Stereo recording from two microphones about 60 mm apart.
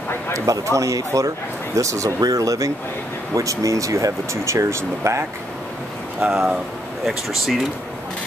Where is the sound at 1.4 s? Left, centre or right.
Left.